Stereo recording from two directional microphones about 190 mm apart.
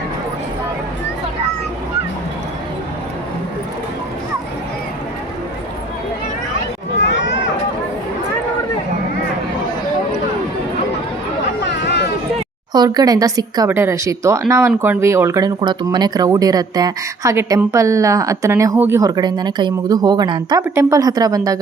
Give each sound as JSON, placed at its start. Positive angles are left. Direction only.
{"t": 7.0, "sound": "run", "side_deg": 75}
{"t": 11.6, "sound": "a sound", "side_deg": 65}
{"t": 12.7, "sound": "speech", "side_deg": -20}